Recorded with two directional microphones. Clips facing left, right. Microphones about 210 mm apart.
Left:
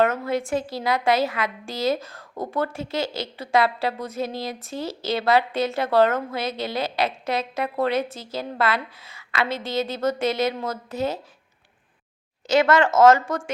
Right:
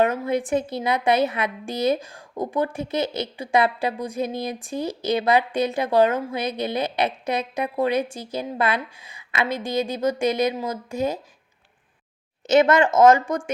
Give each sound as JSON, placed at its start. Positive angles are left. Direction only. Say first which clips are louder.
{"t": 0.0, "sound": "a woman's voice", "louder": "right 1 dB", "side_deg": -15}
{"t": 12.5, "sound": "a woman's voice", "louder": "right 2 dB", "side_deg": -20}